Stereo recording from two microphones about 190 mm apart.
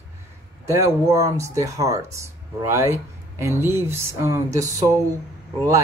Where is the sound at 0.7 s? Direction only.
15° right (ahead or behind).